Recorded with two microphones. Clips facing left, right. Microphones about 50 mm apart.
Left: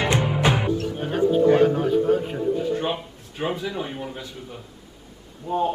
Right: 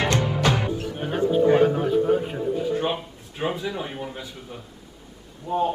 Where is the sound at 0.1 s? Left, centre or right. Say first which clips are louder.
Left 1 dB; centre.